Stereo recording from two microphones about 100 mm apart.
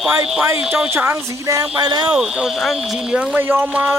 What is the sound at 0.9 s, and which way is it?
Speech, 25° right (ahead or behind).